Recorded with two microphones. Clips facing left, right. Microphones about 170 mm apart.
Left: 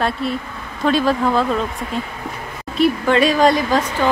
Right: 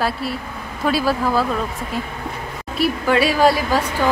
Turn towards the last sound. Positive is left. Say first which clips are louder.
# left 1 dB
turn(degrees=-10)  # may be behind; listen again after turning